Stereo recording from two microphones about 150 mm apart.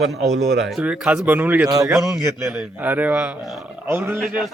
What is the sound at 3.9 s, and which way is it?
Speech, 15° right (ahead or behind).